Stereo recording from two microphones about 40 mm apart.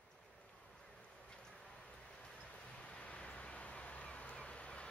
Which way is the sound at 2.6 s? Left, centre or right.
Left.